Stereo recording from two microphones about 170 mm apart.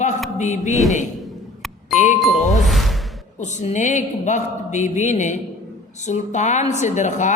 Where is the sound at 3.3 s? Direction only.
45° left (ahead or behind).